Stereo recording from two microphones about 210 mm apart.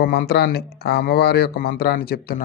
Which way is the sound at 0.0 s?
45° left (ahead or behind).